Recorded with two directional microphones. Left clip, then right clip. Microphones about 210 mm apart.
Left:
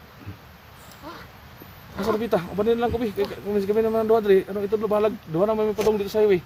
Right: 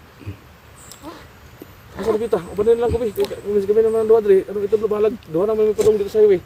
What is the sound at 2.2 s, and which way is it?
Speech, 45° left (ahead or behind).